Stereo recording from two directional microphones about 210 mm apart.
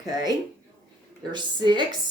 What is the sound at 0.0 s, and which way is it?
A woman's voice, 20° right (ahead or behind).